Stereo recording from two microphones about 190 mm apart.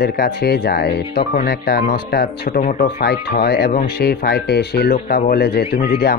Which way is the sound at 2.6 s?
40° left (ahead or behind).